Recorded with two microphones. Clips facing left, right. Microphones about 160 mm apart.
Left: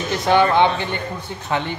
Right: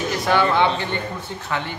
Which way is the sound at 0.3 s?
20° left (ahead or behind).